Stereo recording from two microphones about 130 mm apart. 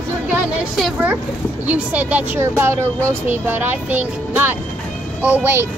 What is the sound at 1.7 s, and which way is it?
Speech, 10° right (ahead or behind).